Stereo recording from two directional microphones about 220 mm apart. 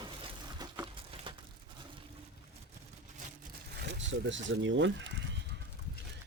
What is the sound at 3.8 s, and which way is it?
Speech, 55° right (ahead or behind).